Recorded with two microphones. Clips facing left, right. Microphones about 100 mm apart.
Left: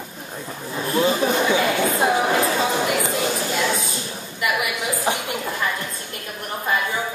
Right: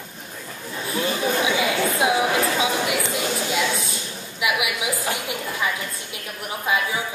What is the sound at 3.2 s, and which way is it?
A woman's voice, 5° left (ahead or behind).